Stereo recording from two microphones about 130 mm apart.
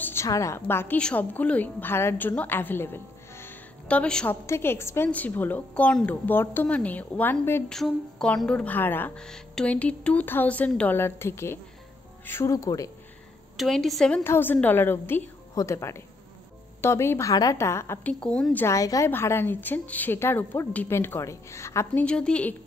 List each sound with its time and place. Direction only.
0.0 s a woman's voice: 20° left (ahead or behind)
4.5 s a woman's voice: 20° left (ahead or behind)
7.7 s a woman's voice: 5° left (ahead or behind); by 12.9 s 25° left (ahead or behind)
13.6 s speech: centre (ahead or behind)
14.2 s a woman's voice: 15° left (ahead or behind)
18.2 s a woman's voice: 10° left (ahead or behind)
18.8 s a woman's voice: 25° left (ahead or behind)
22.0 s a woman's voice: 10° left (ahead or behind)